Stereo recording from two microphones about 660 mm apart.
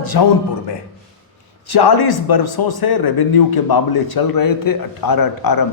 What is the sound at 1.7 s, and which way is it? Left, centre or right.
A man's voice, left.